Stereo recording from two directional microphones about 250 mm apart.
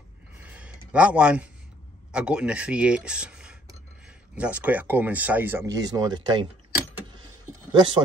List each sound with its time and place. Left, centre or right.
0.4 s a sound: centre
2.1 s speech: centre
7.7 s speech: centre